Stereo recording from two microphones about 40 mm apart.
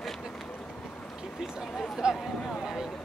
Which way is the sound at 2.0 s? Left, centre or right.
Right.